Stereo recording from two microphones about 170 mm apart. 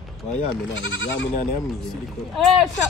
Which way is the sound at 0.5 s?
90° left.